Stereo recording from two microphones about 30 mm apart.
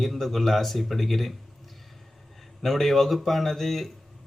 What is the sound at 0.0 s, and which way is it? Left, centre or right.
Speech, centre.